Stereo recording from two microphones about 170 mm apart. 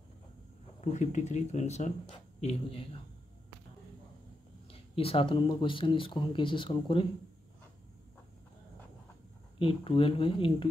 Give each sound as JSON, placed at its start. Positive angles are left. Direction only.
{"t": 0.7, "sound": "a man's voice", "side_deg": 45}
{"t": 4.6, "sound": "speech", "side_deg": 35}
{"t": 9.6, "sound": "speech", "side_deg": 30}